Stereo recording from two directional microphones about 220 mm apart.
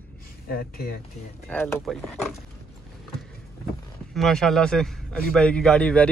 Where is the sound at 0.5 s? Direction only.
45° left (ahead or behind).